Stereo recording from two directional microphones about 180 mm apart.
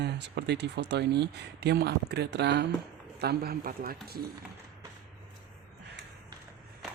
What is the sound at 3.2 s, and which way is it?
Speech, 60° right (ahead or behind).